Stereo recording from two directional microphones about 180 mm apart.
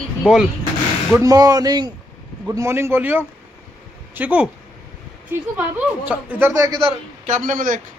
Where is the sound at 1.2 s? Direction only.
20° right (ahead or behind).